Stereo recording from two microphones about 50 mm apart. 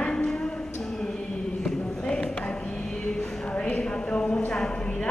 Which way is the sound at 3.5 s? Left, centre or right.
Left.